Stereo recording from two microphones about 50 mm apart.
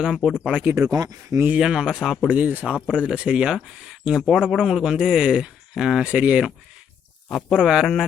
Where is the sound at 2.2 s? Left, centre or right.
Right.